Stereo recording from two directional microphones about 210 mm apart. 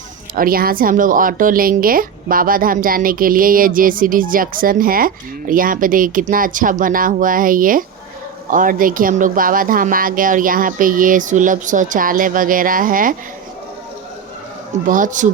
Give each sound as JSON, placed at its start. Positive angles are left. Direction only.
{"t": 0.3, "sound": "speech", "side_deg": -45}
{"t": 14.8, "sound": "speech", "side_deg": -40}